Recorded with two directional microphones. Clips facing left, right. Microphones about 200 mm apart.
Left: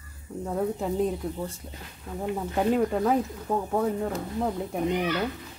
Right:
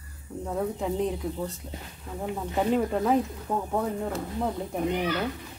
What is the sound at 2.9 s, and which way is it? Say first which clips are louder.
Speech: even; centre (ahead or behind).